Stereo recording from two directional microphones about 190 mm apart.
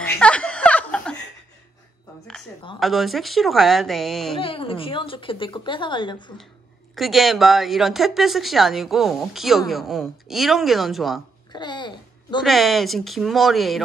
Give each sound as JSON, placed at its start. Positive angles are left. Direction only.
{"t": 0.0, "sound": "chuckle", "side_deg": 5}
{"t": 2.8, "sound": "speech", "side_deg": 0}
{"t": 4.4, "sound": "speech", "side_deg": 30}
{"t": 7.0, "sound": "speech", "side_deg": 0}
{"t": 11.5, "sound": "a sound", "side_deg": 25}
{"t": 12.4, "sound": "speech", "side_deg": 0}